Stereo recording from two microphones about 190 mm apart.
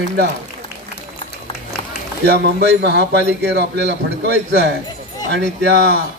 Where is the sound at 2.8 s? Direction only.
65° right (ahead or behind).